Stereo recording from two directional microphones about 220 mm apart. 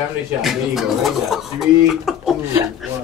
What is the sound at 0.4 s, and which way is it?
Speech, centre (ahead or behind).